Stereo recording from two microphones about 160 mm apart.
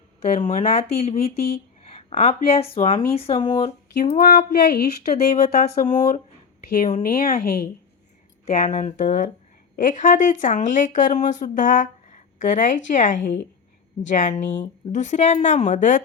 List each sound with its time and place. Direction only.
0.2 s speech: 40° left (ahead or behind)
4.2 s speech: 75° left (ahead or behind)
5.1 s speech: 45° left (ahead or behind)
5.6 s a woman's voice: 60° left (ahead or behind)
8.4 s speech: 45° left (ahead or behind)